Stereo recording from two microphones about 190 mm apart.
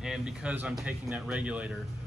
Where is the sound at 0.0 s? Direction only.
5° right (ahead or behind).